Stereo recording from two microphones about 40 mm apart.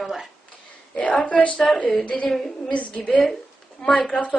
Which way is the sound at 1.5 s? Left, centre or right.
Centre.